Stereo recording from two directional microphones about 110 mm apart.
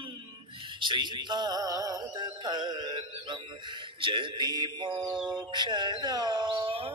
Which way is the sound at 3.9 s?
50° right (ahead or behind).